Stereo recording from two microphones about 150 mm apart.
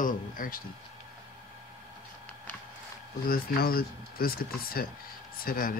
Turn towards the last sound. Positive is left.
turn(degrees=70)  # may be behind; listen again after turning